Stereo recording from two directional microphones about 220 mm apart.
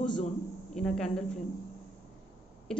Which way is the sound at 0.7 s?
5° left (ahead or behind).